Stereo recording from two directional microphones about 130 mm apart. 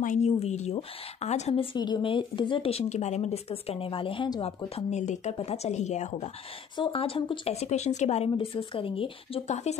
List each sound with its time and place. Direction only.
0.0 s speech: 85° left
0.4 s speech: 55° left (ahead or behind)
4.7 s speech: 65° left (ahead or behind)
6.8 s speech: 45° left (ahead or behind)